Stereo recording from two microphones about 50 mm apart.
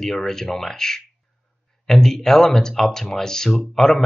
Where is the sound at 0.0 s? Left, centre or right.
Centre.